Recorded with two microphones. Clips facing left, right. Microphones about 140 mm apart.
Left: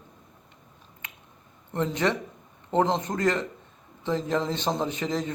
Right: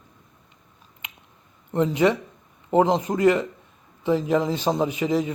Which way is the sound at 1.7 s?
15° right (ahead or behind).